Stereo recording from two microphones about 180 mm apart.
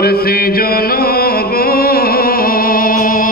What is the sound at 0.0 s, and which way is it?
Music, 60° left (ahead or behind).